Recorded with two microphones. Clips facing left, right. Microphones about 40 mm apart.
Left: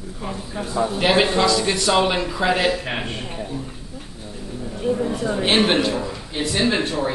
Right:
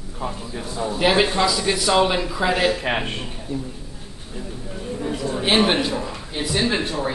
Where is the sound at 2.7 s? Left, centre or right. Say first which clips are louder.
Right 2 dB; right.